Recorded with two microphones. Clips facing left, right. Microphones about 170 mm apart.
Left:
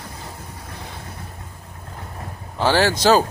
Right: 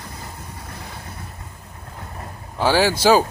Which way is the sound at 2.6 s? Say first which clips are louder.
Even; 10° right (ahead or behind).